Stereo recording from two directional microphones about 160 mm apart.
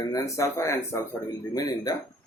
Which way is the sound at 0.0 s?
20° left (ahead or behind).